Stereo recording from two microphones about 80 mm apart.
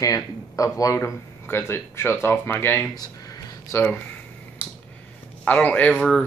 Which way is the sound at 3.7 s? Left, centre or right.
Left.